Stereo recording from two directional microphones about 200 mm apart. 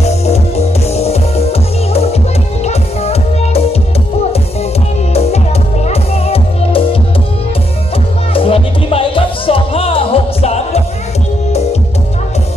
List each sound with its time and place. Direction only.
0.0 s music: 30° left (ahead or behind)
5.1 s music: 30° left (ahead or behind)
8.3 s music: 30° left (ahead or behind)